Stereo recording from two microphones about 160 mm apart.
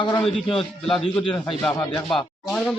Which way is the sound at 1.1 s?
10° left (ahead or behind).